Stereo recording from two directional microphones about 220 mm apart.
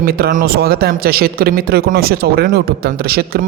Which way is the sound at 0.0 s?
40° right (ahead or behind).